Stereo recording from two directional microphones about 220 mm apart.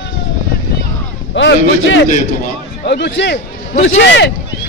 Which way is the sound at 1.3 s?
55° left (ahead or behind).